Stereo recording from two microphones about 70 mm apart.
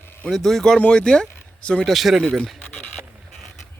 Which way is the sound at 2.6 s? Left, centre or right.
Centre.